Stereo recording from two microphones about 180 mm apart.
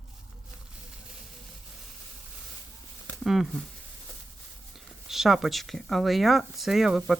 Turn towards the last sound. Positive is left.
turn(degrees=0)  # may be behind; listen again after turning